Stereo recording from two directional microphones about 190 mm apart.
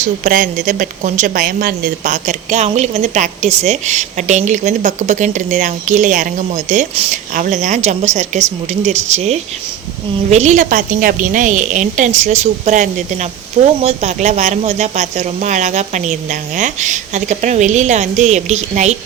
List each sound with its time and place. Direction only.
0.0 s speech: 45° right (ahead or behind)